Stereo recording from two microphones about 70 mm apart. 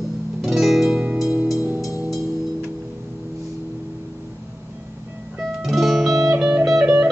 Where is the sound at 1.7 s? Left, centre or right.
Left.